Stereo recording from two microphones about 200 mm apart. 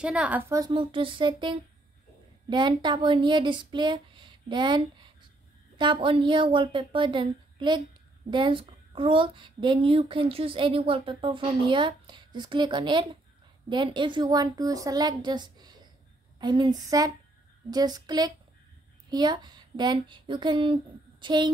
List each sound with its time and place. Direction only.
0.0 s a woman's voice: 5° right (ahead or behind); by 21.5 s 20° right (ahead or behind)